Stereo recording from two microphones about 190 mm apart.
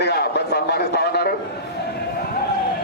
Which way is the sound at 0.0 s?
60° left (ahead or behind).